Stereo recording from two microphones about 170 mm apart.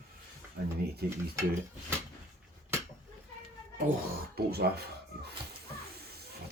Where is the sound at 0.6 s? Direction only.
75° right (ahead or behind).